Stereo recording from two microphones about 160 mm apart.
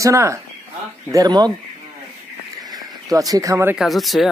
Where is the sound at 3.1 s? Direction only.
20° right (ahead or behind).